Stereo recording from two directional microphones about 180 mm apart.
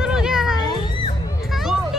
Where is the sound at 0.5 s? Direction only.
25° left (ahead or behind).